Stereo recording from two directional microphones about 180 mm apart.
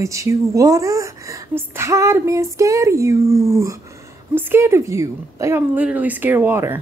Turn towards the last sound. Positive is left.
turn(degrees=-10)  # may be behind; listen again after turning